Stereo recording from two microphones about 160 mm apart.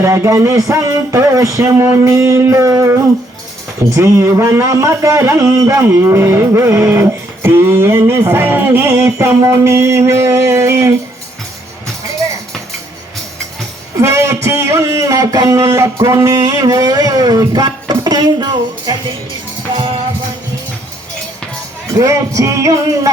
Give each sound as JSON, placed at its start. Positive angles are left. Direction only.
{"t": 0.0, "sound": "speech", "side_deg": -15}
{"t": 14.0, "sound": "a sound", "side_deg": -20}
{"t": 21.9, "sound": "music", "side_deg": -20}